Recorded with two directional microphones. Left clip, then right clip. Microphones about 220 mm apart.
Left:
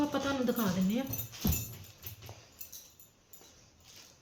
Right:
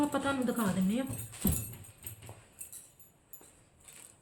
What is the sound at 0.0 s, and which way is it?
Speech, 15° right (ahead or behind).